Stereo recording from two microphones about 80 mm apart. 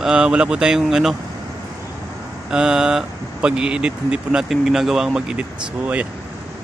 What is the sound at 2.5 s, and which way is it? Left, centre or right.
Speech, centre.